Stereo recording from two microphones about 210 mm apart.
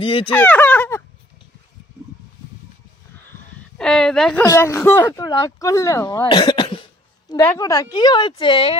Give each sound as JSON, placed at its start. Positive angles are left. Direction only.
{"t": 0.0, "sound": "a woman's voice", "side_deg": 25}
{"t": 0.3, "sound": "a sound", "side_deg": 5}
{"t": 3.8, "sound": "speech", "side_deg": 5}
{"t": 4.4, "sound": "a woman's voice", "side_deg": 15}